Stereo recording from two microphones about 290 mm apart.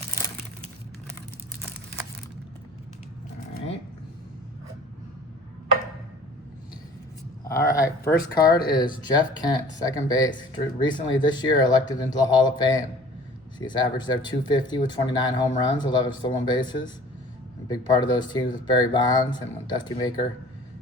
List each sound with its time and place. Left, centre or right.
7.4 s speech: centre
8.4 s speech: left
9.1 s speech: centre